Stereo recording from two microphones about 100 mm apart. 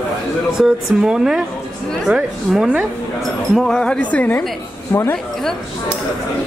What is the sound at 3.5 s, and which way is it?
Speech, 5° left (ahead or behind).